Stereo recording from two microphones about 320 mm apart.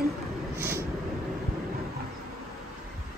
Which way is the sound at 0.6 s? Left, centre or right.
Centre.